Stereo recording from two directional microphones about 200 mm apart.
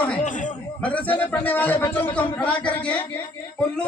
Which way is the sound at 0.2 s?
40° left (ahead or behind).